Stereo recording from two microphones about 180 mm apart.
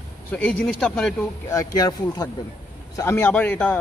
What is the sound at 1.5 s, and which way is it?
A man's voice, 20° left (ahead or behind).